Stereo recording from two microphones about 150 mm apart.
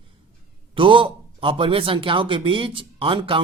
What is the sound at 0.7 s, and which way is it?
A man's voice, 35° right (ahead or behind).